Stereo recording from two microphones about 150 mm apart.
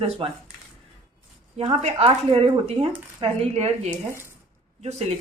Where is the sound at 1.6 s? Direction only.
40° right (ahead or behind).